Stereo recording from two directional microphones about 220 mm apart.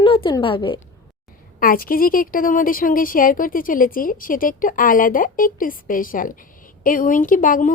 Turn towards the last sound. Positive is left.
turn(degrees=40)  # may be behind; listen again after turning